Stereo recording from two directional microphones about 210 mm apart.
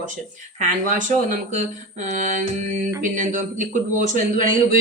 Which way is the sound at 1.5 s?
35° right (ahead or behind).